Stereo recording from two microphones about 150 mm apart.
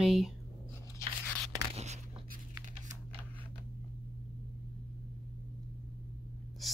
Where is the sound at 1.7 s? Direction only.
45° right (ahead or behind).